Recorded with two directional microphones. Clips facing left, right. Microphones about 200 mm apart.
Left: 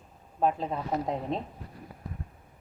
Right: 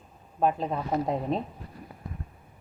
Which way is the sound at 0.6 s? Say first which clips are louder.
Right 2 dB; centre (ahead or behind).